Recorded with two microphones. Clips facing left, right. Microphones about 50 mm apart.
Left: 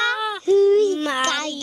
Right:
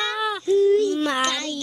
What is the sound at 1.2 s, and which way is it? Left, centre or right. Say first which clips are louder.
Child singing: left 2 dB; left.